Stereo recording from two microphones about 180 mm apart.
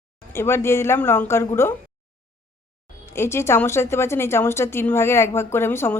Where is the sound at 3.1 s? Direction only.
15° left (ahead or behind).